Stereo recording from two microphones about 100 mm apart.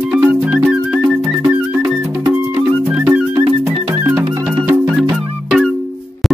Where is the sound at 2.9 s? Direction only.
15° right (ahead or behind).